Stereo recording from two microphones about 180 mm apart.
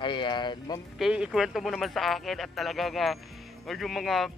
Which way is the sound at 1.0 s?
5° right (ahead or behind).